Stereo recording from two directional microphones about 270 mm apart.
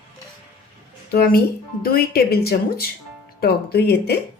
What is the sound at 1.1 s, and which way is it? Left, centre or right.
Speech, left.